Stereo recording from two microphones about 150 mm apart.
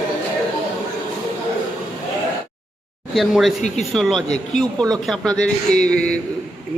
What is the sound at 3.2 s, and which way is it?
A man's voice, centre (ahead or behind).